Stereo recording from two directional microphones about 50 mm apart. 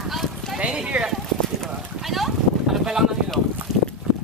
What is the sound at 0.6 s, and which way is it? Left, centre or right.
Speech, right.